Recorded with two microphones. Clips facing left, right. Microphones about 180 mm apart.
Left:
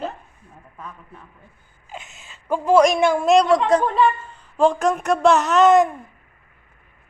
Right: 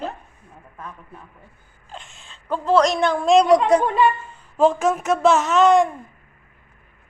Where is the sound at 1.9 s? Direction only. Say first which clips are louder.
Left 2 dB; 5° left (ahead or behind).